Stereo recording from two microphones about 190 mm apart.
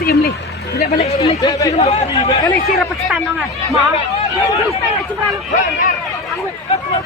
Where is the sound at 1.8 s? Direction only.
35° left (ahead or behind).